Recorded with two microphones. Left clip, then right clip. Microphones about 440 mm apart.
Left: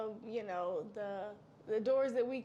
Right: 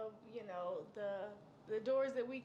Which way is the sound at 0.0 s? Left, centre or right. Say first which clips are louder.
Left 7 dB; left.